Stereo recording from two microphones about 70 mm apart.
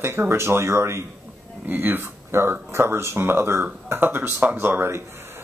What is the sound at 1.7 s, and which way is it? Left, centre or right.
Speech, right.